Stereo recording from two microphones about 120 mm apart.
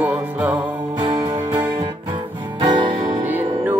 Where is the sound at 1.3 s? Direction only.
35° right (ahead or behind).